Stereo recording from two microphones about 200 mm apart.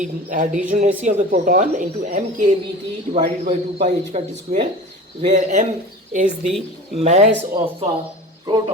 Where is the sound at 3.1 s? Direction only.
30° right (ahead or behind).